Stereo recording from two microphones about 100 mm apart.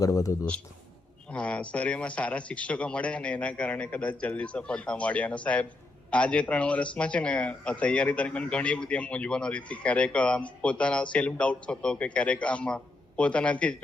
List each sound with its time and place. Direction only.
0.0 s a man's voice: 35° left (ahead or behind)
1.3 s a man's voice: 10° left (ahead or behind)